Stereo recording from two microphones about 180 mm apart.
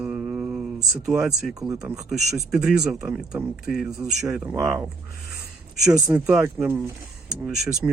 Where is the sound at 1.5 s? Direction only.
20° right (ahead or behind).